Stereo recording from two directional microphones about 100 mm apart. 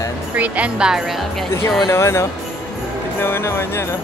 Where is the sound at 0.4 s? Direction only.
10° right (ahead or behind).